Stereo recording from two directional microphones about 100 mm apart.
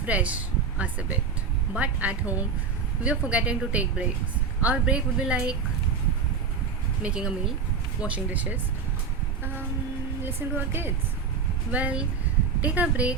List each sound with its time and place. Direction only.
0.0 s speech: 15° right (ahead or behind)
7.0 s speech: 10° right (ahead or behind)
10.2 s a woman's voice: 20° right (ahead or behind)